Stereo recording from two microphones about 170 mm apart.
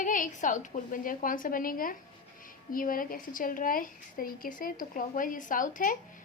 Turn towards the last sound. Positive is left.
turn(degrees=50)  # may be behind; listen again after turning